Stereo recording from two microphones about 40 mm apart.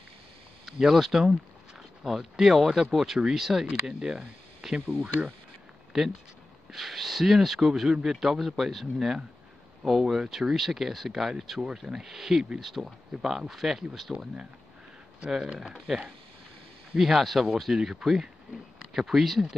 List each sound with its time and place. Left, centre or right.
0.7 s speech: centre
4.6 s a sound: centre
5.9 s speech: centre
15.3 s speech: centre
15.7 s speech: centre